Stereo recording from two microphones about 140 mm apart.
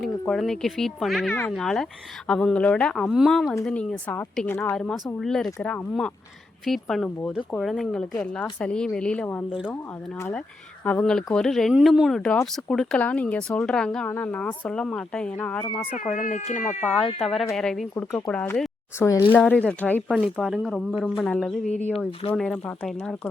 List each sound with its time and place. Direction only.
0.0 s speech: centre (ahead or behind)
5.2 s speech: centre (ahead or behind)
10.8 s speech: 5° left (ahead or behind)
16.1 s speech: 70° left (ahead or behind)
16.8 s speech: 5° left (ahead or behind)
18.9 s speech: 20° left (ahead or behind)
20.1 s speech: 5° right (ahead or behind)
21.9 s speech: 45° left (ahead or behind)
22.4 s speech: 5° left (ahead or behind)